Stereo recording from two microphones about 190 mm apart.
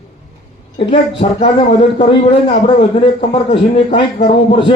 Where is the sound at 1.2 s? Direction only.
30° left (ahead or behind).